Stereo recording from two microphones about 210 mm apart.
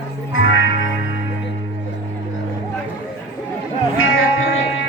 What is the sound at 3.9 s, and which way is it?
Music, 75° left (ahead or behind).